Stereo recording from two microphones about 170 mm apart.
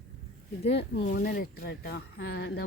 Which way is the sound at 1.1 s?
55° left (ahead or behind).